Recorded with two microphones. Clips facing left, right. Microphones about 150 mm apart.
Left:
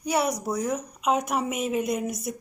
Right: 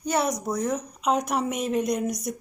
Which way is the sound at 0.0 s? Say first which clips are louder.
Even; 10° left (ahead or behind).